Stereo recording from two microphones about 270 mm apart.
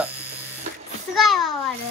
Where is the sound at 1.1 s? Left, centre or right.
Centre.